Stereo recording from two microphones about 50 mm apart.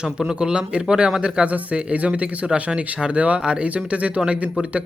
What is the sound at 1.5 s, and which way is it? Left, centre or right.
Speech, right.